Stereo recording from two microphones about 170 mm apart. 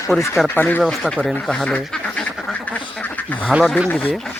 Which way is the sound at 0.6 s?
10° left (ahead or behind).